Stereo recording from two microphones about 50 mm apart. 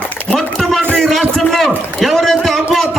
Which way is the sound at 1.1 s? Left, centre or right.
Centre.